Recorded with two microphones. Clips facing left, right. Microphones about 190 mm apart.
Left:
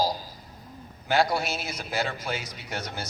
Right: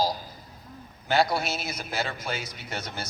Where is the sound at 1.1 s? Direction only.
15° left (ahead or behind).